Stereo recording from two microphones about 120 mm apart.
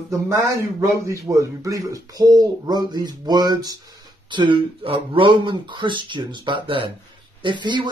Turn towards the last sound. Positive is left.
turn(degrees=-40)  # may be behind; listen again after turning